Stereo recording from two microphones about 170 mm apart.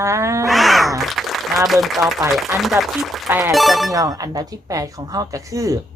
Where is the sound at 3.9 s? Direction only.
20° right (ahead or behind).